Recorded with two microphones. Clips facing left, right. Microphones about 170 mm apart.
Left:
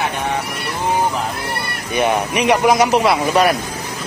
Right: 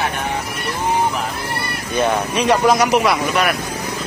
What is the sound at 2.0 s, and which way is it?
A man's voice, 15° left (ahead or behind).